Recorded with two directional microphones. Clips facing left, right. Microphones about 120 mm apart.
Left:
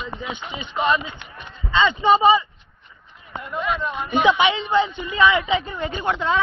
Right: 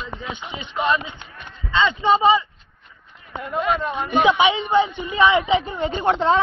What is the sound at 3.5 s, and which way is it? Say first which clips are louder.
Speech: right 3 dB; 45° right (ahead or behind).